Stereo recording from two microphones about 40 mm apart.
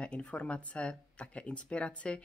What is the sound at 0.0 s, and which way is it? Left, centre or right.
Speech, left.